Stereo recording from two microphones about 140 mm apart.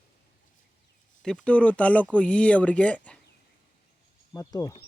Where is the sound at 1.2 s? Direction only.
5° left (ahead or behind).